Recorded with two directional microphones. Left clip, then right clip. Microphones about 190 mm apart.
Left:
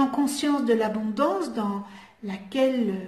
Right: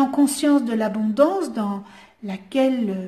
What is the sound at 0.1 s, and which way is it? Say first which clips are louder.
Speech: right 6 dB; 55° right (ahead or behind).